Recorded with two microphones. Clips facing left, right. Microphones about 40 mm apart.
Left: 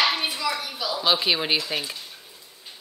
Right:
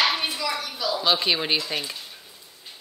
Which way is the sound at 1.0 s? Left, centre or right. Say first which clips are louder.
Left 1 dB; centre.